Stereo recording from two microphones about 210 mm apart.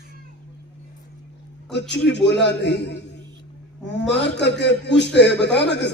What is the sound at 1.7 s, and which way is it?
A man's voice, 55° left (ahead or behind).